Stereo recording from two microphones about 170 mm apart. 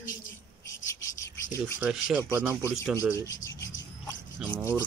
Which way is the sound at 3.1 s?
20° left (ahead or behind).